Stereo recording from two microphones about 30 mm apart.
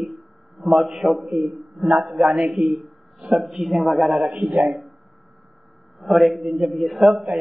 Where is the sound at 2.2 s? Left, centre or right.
Centre.